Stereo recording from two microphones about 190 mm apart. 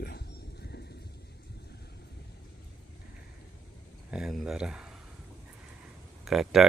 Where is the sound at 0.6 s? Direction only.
60° left (ahead or behind).